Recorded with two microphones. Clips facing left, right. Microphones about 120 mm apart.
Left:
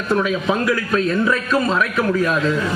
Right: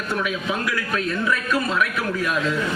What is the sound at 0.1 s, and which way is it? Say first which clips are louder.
A man's voice: left 7 dB; 30° left (ahead or behind).